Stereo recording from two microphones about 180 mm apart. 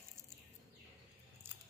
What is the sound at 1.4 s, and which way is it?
Scissors, 10° right (ahead or behind).